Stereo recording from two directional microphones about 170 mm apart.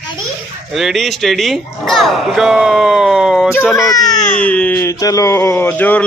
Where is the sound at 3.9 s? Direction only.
20° left (ahead or behind).